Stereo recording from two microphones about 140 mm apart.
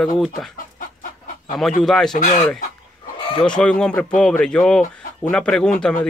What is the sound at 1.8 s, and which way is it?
Speech, 5° left (ahead or behind).